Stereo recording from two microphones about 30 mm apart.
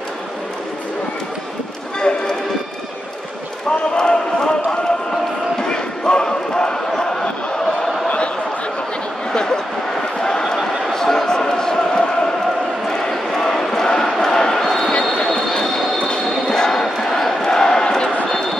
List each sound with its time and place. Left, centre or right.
2.0 s run: left
3.9 s run: left
5.6 s basketball bounce: left
7.0 s a sound: left
9.3 s a sound: left
13.8 s chant: left
14.6 s basketball bounce: centre
15.5 s vehicle: centre
16.4 s basketball bounce: centre